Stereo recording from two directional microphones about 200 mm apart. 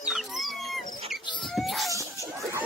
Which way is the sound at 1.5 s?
Centre (ahead or behind).